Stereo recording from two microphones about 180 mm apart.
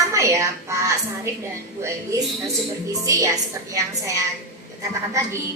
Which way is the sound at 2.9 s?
20° right (ahead or behind).